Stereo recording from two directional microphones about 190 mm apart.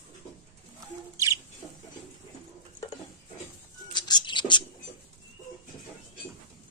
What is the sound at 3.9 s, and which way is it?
Bird, 25° left (ahead or behind).